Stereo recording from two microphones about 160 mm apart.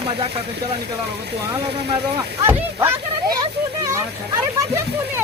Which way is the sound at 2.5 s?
15° right (ahead or behind).